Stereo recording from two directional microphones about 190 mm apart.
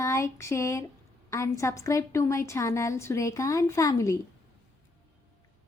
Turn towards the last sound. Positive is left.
turn(degrees=15)  # may be behind; listen again after turning